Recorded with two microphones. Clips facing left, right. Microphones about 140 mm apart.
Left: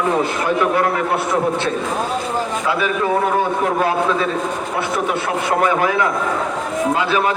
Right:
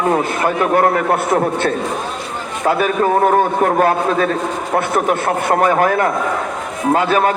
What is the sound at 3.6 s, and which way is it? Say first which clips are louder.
A man's voice: right 3 dB; 50° right (ahead or behind).